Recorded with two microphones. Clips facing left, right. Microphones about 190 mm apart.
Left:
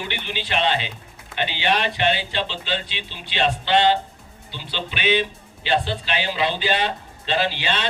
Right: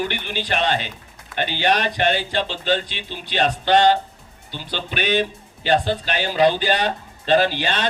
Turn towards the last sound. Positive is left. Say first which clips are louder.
# right 5 dB
turn(degrees=-45)  # may be behind; listen again after turning